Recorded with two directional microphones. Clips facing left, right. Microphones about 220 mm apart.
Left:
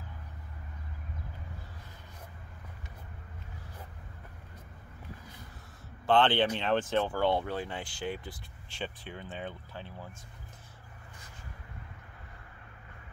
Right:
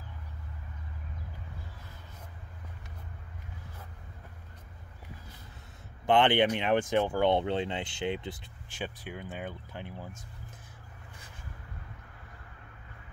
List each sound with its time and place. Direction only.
6.0 s speech: 15° right (ahead or behind)
8.8 s speech: 10° right (ahead or behind)